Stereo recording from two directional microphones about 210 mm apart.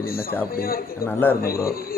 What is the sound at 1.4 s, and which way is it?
Speech, 45° left (ahead or behind).